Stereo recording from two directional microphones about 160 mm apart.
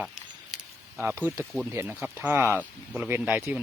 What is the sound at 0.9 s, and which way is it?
Speech, 5° right (ahead or behind).